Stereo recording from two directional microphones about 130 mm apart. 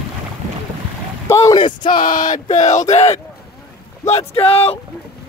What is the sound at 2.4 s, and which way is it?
Speech, 65° left (ahead or behind).